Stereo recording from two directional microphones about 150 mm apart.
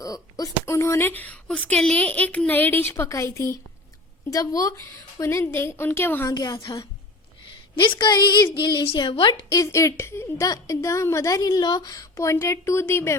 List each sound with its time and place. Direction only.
0.0 s a woman's voice: 25° left (ahead or behind)
6.3 s a woman's voice: 30° left (ahead or behind)
7.8 s a woman's voice: 30° left (ahead or behind)
9.5 s a woman's voice: 20° left (ahead or behind)